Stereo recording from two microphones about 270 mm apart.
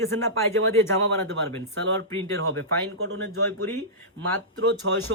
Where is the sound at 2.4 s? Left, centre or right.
Right.